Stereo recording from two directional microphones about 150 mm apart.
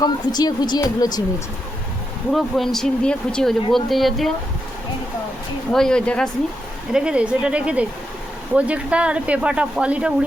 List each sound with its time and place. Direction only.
0.0 s speech: 25° left (ahead or behind)
2.3 s speech: centre (ahead or behind)
5.7 s speech: 5° left (ahead or behind)
6.9 s speech: 5° right (ahead or behind)